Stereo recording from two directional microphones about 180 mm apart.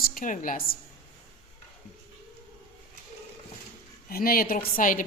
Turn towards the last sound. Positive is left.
turn(degrees=45)  # may be behind; listen again after turning